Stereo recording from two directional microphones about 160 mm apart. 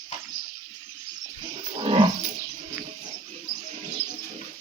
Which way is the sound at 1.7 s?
35° right (ahead or behind).